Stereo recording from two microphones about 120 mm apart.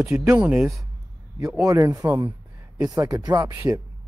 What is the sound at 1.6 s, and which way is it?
Speech, 30° right (ahead or behind).